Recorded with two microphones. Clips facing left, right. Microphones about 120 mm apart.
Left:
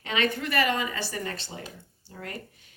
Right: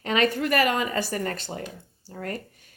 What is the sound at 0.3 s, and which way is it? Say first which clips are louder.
A woman's voice: right 4 dB; 50° right (ahead or behind).